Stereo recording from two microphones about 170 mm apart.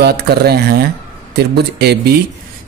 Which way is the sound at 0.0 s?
70° right (ahead or behind).